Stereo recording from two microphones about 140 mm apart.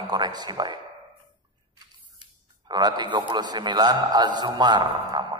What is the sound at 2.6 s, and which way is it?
A man's voice, 30° right (ahead or behind).